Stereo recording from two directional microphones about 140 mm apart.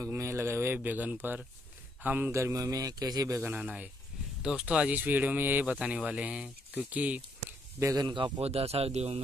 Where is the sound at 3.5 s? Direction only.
10° right (ahead or behind).